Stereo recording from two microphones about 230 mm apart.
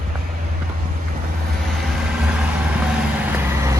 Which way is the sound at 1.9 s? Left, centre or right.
Centre.